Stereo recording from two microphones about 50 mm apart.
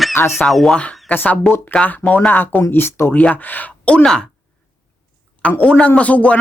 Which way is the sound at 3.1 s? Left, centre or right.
Left.